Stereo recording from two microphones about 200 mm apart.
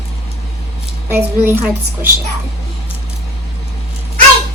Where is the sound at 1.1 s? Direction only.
10° right (ahead or behind).